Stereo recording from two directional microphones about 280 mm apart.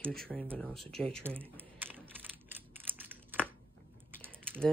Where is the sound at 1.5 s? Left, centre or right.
Centre.